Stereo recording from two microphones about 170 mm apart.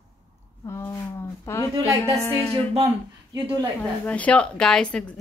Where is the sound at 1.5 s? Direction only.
15° left (ahead or behind).